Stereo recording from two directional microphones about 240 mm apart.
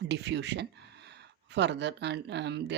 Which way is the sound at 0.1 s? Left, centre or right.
Right.